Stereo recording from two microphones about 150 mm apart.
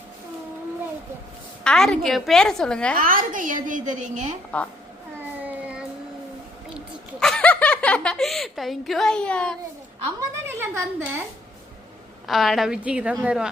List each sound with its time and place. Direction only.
1.6 s a woman's voice: 5° left (ahead or behind)
3.0 s a woman's voice: 70° right (ahead or behind)
5.4 s child singing: 10° right (ahead or behind)
6.7 s speech: 5° left (ahead or behind)
10.2 s speech: 15° right (ahead or behind)
12.3 s a woman's voice: centre (ahead or behind)